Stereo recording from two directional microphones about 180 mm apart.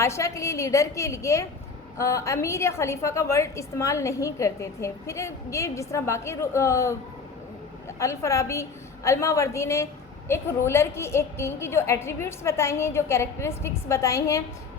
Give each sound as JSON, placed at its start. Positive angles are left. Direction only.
{"t": 0.0, "sound": "a woman's voice", "side_deg": 15}
{"t": 7.9, "sound": "a woman's voice", "side_deg": 15}